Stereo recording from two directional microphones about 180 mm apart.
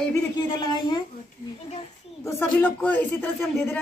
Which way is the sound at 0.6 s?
25° left (ahead or behind).